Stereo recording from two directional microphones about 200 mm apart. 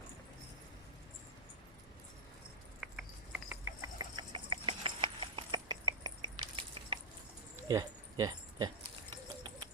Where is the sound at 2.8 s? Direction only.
5° right (ahead or behind); by 8.7 s 20° right (ahead or behind).